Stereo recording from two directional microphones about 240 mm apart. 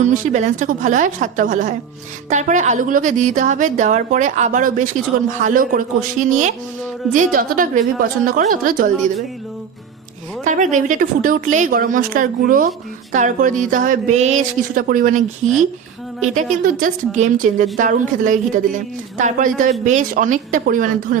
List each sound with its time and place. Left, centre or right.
0.0 s a woman's voice: right
10.4 s a woman's voice: right
16.2 s a woman's voice: right